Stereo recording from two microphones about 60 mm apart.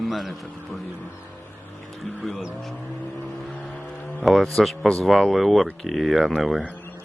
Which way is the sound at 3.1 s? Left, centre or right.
Centre.